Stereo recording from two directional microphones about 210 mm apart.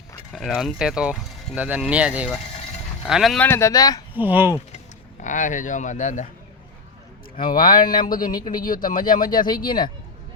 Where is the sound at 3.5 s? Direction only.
15° left (ahead or behind).